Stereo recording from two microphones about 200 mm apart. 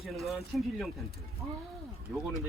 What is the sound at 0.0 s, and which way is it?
Speech, centre (ahead or behind).